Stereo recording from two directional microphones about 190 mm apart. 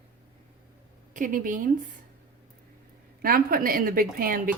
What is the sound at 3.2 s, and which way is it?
A woman's voice, 50° right (ahead or behind).